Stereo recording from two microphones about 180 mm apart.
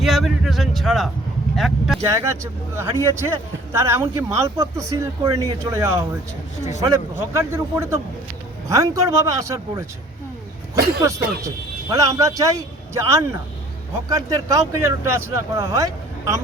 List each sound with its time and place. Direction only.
0.0 s speech: centre (ahead or behind)
2.0 s speech: 15° right (ahead or behind)
6.6 s speech: 40° left (ahead or behind)
6.8 s speech: 15° right (ahead or behind)
10.8 s speech: 60° right (ahead or behind)
11.4 s speech: 20° right (ahead or behind)